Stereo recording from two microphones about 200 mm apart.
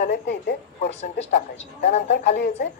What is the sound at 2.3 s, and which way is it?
Speech, 55° left (ahead or behind).